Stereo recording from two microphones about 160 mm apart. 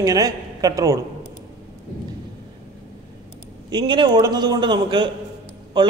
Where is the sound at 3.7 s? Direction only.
30° right (ahead or behind).